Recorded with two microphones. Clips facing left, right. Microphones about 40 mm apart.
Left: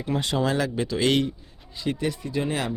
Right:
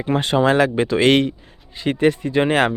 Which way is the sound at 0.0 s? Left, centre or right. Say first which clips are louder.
Right 8 dB; right.